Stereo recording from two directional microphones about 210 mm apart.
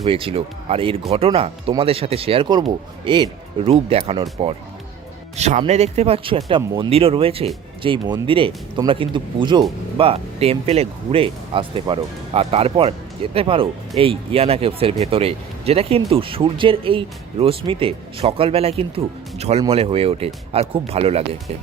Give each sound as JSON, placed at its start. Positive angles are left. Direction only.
{"t": 0.0, "sound": "speech", "side_deg": -25}